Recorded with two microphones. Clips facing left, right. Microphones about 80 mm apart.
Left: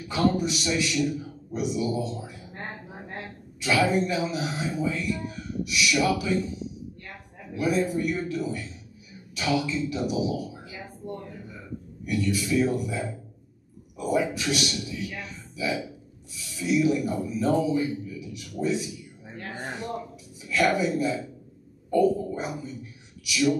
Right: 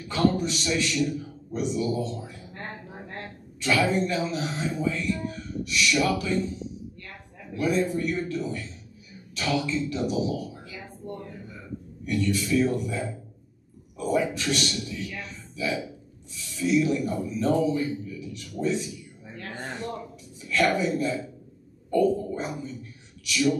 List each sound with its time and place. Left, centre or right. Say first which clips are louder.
0.0 s speech: even; centre
10.8 s a sound: left 1 dB; centre
12.1 s a man's voice: right 1 dB; centre
15.1 s gasp: even; centre
16.3 s speech: right 1 dB; centre
19.2 s a sound: left 1 dB; left
19.5 s speech: left 1 dB; centre